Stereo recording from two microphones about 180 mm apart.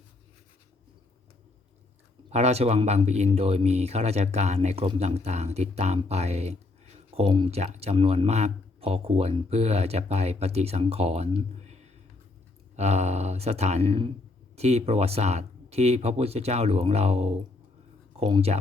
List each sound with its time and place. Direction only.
2.3 s speech: 35° right (ahead or behind)